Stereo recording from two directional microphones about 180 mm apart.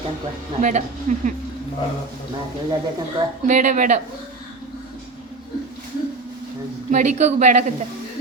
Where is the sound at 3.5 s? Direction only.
45° right (ahead or behind).